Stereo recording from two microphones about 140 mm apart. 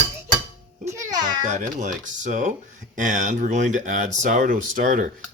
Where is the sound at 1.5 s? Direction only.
60° right (ahead or behind).